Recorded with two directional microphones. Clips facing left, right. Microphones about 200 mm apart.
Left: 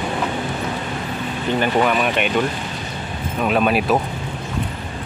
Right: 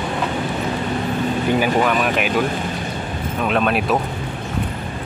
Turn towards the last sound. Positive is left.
turn(degrees=0)  # may be behind; listen again after turning